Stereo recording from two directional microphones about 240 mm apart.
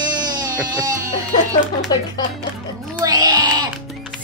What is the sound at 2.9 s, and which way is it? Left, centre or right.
Music, centre.